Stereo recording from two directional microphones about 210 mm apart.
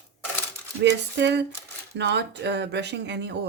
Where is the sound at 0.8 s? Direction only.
55° right (ahead or behind).